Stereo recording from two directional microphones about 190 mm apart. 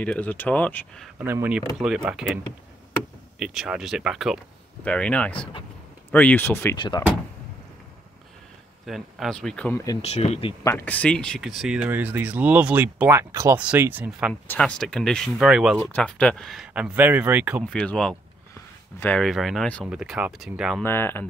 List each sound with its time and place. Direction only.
0.0 s speech: 10° left (ahead or behind)
1.1 s speech: 10° right (ahead or behind); by 6.8 s 10° left (ahead or behind)
8.8 s speech: centre (ahead or behind)
10.0 s speech: 35° left (ahead or behind)
10.6 s speech: 10° left (ahead or behind); by 14.3 s 10° right (ahead or behind)
14.5 s speech: 5° left (ahead or behind)
17.7 s speech: 5° left (ahead or behind)
20.8 s speech: 10° left (ahead or behind)